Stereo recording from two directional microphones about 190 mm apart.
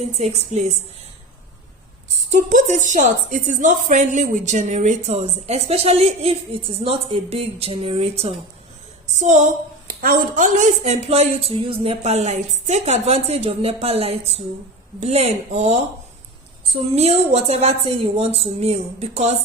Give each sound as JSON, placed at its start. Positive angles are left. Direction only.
{"t": 0.2, "sound": "a woman's voice", "side_deg": -35}
{"t": 2.3, "sound": "a woman's voice", "side_deg": -40}
{"t": 16.9, "sound": "a woman's voice", "side_deg": -35}